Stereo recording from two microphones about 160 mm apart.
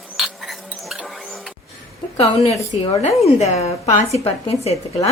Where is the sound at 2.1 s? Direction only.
40° left (ahead or behind).